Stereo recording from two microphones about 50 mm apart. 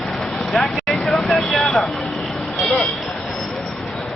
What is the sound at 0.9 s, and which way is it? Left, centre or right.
Vehicle, centre.